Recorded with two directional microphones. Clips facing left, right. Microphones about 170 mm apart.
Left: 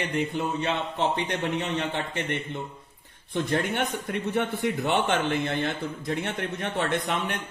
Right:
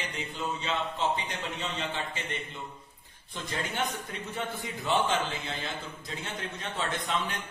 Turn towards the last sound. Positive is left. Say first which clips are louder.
# left 5 dB
turn(degrees=65)  # may be behind; listen again after turning